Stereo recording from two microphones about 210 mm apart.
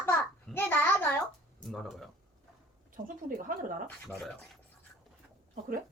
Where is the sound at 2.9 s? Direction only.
40° right (ahead or behind).